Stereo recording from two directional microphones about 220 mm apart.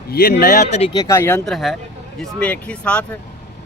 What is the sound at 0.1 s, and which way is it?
Speech, 45° left (ahead or behind).